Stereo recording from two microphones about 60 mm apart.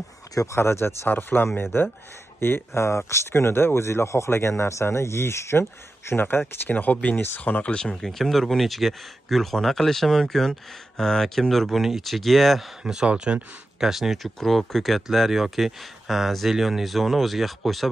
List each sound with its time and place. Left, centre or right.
0.3 s speech: left
0.6 s a man's voice: left
6.7 s speech: left
7.7 s speech: centre
12.8 s speech: centre
13.7 s speech: centre